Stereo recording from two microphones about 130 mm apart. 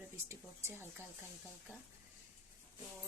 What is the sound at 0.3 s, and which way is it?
Speech, 15° right (ahead or behind).